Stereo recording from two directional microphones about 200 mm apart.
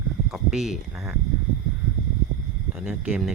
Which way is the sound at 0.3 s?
Centre (ahead or behind).